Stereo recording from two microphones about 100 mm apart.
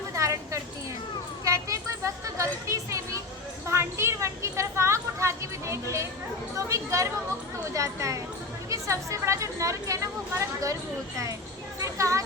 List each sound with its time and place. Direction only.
0.2 s a sound: 30° right (ahead or behind)
6.6 s speech: 30° right (ahead or behind)
11.8 s speech: 30° right (ahead or behind)